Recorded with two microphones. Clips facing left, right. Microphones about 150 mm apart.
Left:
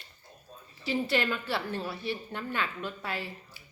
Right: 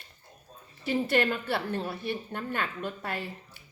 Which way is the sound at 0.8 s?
50° right (ahead or behind).